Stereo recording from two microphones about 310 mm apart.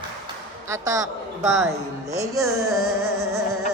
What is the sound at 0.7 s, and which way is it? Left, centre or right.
Speech, centre.